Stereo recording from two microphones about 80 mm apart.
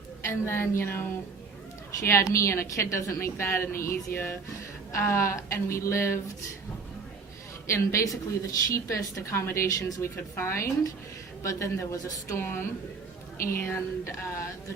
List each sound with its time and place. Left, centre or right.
0.2 s a woman's voice: left
2.0 s a woman's voice: left
7.7 s a woman's voice: left
12.4 s a woman's voice: left